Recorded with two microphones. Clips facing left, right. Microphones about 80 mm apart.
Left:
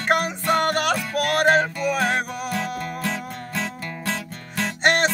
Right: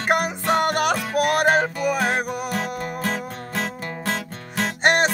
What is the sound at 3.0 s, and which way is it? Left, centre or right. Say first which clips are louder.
Music: right 1 dB; right.